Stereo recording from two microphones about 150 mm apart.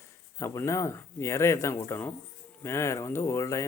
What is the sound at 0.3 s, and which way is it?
Speech, 20° left (ahead or behind).